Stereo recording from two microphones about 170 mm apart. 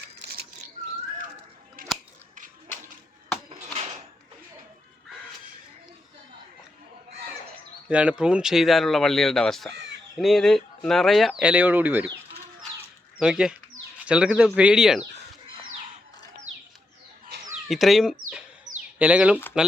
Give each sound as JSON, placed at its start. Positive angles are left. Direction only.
{"t": 7.9, "sound": "speech", "side_deg": -5}
{"t": 13.1, "sound": "speech", "side_deg": -5}
{"t": 17.7, "sound": "speech", "side_deg": 0}